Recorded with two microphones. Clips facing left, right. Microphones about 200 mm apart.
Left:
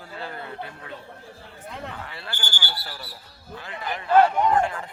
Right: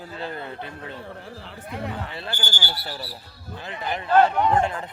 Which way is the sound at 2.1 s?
25° right (ahead or behind).